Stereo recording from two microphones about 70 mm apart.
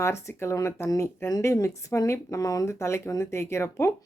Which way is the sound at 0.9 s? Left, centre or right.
Left.